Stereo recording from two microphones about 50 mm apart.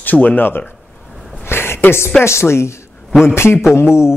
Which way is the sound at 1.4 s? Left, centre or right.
Left.